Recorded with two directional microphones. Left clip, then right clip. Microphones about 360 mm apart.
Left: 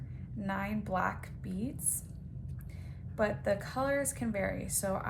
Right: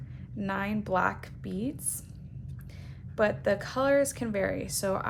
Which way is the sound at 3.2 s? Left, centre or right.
Centre.